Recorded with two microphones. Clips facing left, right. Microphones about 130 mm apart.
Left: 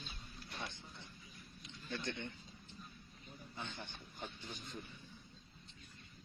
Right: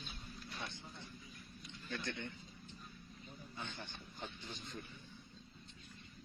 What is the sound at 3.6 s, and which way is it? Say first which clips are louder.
A man's voice: left 1 dB; 15° left (ahead or behind).